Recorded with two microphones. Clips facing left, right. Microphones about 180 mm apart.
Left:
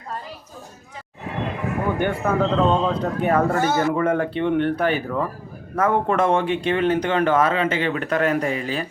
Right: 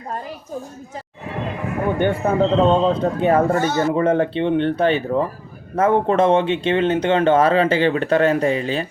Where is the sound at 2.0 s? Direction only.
25° right (ahead or behind).